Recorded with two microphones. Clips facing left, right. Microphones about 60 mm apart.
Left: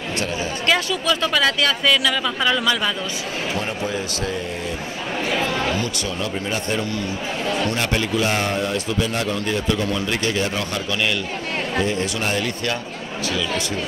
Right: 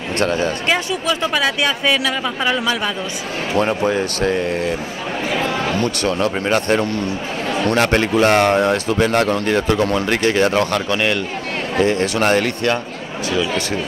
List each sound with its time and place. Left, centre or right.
0.2 s speech: right
0.7 s speech: right
3.5 s speech: right
5.8 s speech: right
11.8 s speech: right